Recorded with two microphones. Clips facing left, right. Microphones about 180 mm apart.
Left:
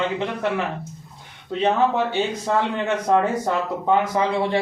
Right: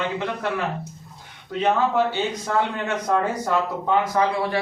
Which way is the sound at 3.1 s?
25° left (ahead or behind).